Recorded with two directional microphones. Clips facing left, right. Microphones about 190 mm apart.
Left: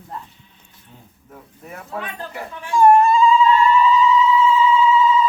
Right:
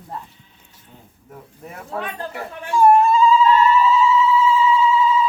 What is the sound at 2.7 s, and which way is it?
Dog, 5° right (ahead or behind).